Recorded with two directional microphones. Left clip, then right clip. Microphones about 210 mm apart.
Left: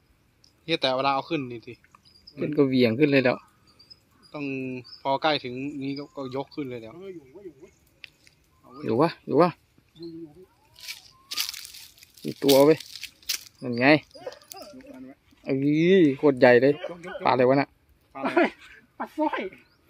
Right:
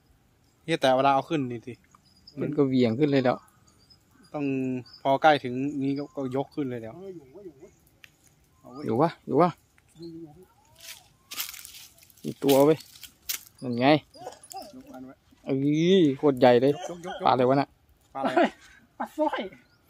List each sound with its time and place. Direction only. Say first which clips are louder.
0.7 s speech: right 2 dB; 40° right (ahead or behind)
2.5 s speech: left 3 dB; 10° left (ahead or behind)
4.3 s speech: right 3 dB; 40° right (ahead or behind)
7.0 s speech: left 1 dB; 10° right (ahead or behind)
8.8 s speech: left 2 dB; 5° left (ahead or behind)
10.9 s a sound: left 6 dB; 15° left (ahead or behind)
12.4 s speech: left 2 dB; 5° left (ahead or behind)
14.1 s dog: left 1 dB; 55° right (ahead or behind)
15.4 s speech: left 2 dB; 5° left (ahead or behind)
18.1 s speech: even; 25° right (ahead or behind)
18.9 s speech: even; 15° right (ahead or behind)